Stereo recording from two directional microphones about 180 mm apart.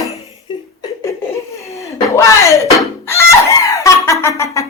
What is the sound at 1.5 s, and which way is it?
Chicken, 15° left (ahead or behind).